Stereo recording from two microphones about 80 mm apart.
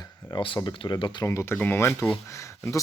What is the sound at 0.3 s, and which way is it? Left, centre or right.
Speech, left.